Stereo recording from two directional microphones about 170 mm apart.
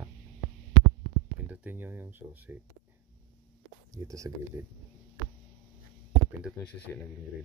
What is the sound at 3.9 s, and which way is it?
Speech, 20° right (ahead or behind).